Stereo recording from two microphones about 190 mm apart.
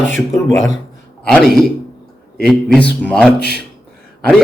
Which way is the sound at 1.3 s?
Centre (ahead or behind).